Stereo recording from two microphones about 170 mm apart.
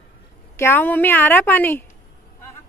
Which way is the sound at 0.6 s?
10° left (ahead or behind).